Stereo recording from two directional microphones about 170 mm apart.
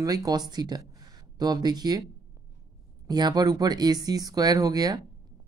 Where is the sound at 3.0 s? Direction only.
25° right (ahead or behind).